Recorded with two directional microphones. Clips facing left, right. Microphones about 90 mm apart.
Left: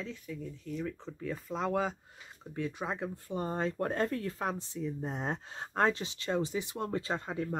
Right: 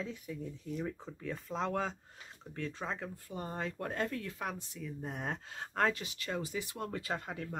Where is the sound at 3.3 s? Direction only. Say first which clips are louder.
Left 6 dB; 30° left (ahead or behind).